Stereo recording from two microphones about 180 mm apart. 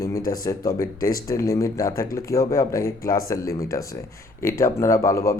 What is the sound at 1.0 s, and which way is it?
Speech, 50° left (ahead or behind).